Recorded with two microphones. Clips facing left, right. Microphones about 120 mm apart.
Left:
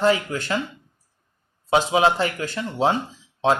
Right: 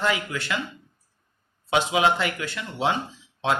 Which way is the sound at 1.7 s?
35° left (ahead or behind).